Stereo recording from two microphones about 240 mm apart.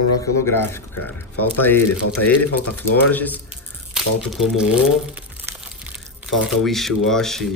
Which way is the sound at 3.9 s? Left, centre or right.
Centre.